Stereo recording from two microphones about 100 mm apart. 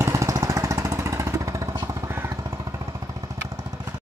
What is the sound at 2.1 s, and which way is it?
Vehicle, 30° right (ahead or behind).